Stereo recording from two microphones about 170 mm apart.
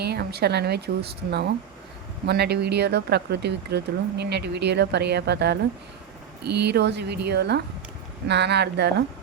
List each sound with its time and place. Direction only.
0.0 s a woman's voice: 70° right (ahead or behind)